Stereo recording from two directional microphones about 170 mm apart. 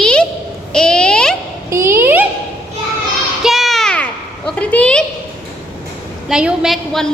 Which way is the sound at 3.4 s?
Centre (ahead or behind).